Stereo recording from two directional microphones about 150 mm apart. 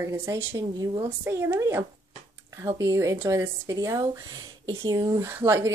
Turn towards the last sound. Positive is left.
turn(degrees=-15)  # may be behind; listen again after turning